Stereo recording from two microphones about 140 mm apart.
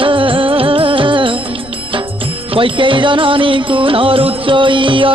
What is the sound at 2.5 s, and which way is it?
Music, 40° right (ahead or behind).